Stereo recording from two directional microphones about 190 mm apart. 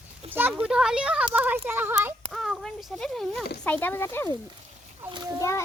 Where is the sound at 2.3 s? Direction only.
Centre (ahead or behind).